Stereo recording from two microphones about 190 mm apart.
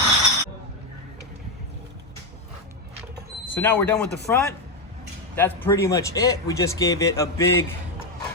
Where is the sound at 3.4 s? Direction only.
10° left (ahead or behind).